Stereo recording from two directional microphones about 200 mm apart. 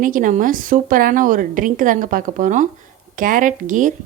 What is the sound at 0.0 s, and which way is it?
Speech, 40° right (ahead or behind).